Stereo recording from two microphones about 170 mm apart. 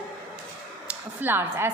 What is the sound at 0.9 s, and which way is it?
Speech, 10° right (ahead or behind).